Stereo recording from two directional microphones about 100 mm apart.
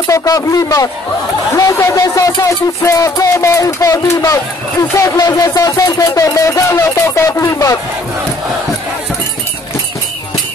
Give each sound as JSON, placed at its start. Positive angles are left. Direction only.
{"t": 0.0, "sound": "music", "side_deg": 35}